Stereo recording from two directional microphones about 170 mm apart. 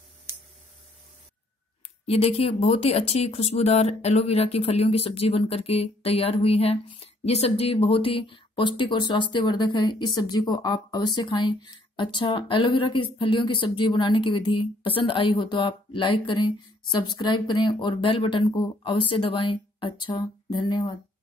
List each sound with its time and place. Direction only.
2.0 s speech: 35° left (ahead or behind)